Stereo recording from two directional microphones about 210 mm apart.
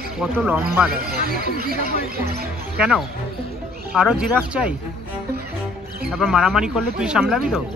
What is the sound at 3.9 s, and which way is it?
Speech, 5° right (ahead or behind).